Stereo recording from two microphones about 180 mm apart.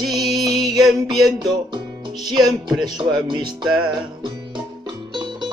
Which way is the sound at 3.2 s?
25° right (ahead or behind).